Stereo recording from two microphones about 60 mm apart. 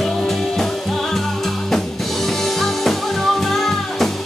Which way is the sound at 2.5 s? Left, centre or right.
Centre.